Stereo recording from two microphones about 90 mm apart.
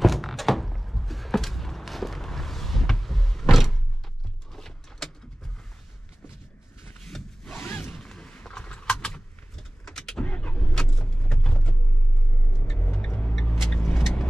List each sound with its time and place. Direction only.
0.0 s a sound: centre (ahead or behind)
7.1 s vehicle: 5° left (ahead or behind)
7.5 s zipper: 25° left (ahead or behind)
7.9 s a sound: 5° left (ahead or behind)
12.7 s car: 15° left (ahead or behind)
13.5 s vehicle: 10° left (ahead or behind)